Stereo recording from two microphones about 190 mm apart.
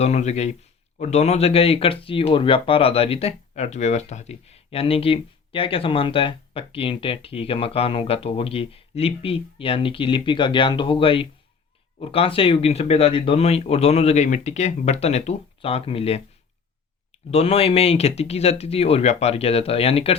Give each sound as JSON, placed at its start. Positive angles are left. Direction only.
{"t": 0.0, "sound": "speech", "side_deg": 35}
{"t": 17.3, "sound": "speech", "side_deg": 30}